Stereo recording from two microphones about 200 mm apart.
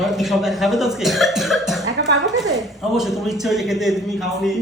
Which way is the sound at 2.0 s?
60° right (ahead or behind).